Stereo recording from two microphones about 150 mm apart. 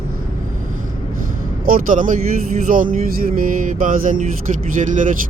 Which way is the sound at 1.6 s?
65° right (ahead or behind).